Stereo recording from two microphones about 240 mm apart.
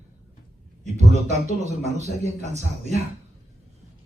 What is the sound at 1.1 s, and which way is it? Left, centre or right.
Speech, right.